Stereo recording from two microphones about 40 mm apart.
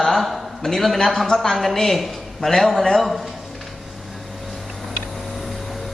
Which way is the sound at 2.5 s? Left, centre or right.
Centre.